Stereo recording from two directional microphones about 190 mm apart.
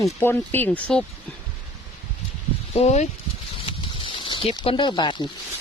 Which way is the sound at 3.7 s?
30° left (ahead or behind).